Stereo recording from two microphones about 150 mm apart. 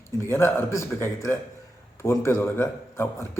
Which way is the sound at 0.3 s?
15° left (ahead or behind).